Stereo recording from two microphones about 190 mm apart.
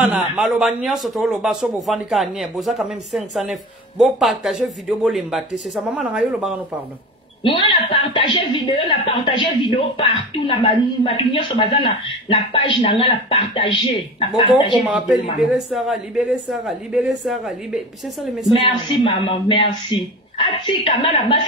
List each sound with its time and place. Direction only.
0.0 s a man's voice: 5° right (ahead or behind)
7.4 s a woman's voice: 25° left (ahead or behind)
14.8 s a man's voice: 5° right (ahead or behind)
18.5 s a woman's voice: 25° left (ahead or behind)